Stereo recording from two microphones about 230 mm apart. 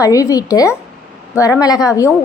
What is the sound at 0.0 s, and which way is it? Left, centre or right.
A woman's voice, centre.